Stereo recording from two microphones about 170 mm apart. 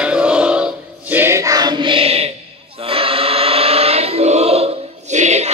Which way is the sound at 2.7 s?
35° right (ahead or behind).